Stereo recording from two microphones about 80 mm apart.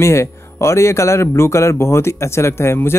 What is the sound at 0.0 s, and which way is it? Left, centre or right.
Speech, left.